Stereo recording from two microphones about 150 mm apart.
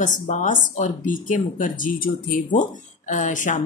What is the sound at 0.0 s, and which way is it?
Speech, 55° left (ahead or behind).